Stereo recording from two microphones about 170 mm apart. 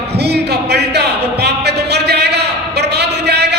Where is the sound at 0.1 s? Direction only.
75° right (ahead or behind).